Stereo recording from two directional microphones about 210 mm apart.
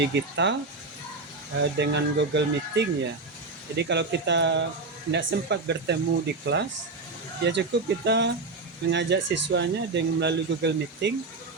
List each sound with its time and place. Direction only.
0.0 s speech: 55° right (ahead or behind)
1.8 s speech: 55° right (ahead or behind)